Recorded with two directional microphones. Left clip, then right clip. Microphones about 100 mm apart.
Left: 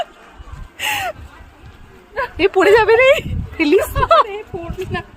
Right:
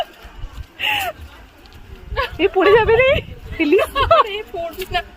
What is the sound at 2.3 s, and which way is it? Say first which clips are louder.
Speech: left 2 dB; 50° left (ahead or behind).